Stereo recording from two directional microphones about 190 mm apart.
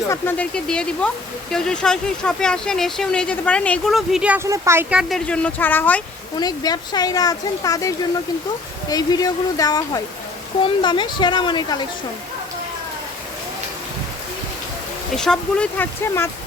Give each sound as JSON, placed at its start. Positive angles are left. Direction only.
{"t": 0.1, "sound": "speech", "side_deg": 10}
{"t": 6.3, "sound": "speech", "side_deg": 20}
{"t": 15.1, "sound": "speech", "side_deg": 5}